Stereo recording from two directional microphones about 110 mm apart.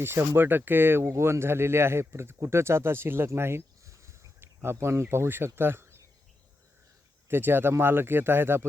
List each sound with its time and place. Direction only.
0.0 s speech: 20° right (ahead or behind)
7.3 s speech: 20° right (ahead or behind)